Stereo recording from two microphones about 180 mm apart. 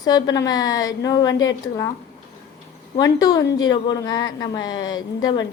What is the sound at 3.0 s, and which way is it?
A woman's voice, 20° left (ahead or behind).